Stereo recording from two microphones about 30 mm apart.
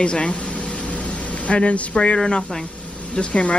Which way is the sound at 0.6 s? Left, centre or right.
Left.